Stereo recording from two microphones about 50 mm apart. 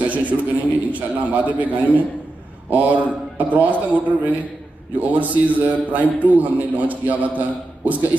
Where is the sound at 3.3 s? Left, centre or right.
Right.